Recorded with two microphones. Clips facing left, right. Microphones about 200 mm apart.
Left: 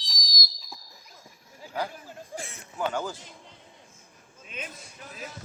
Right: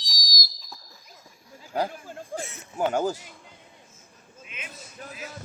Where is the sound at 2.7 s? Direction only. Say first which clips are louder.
Right 5 dB; 45° right (ahead or behind).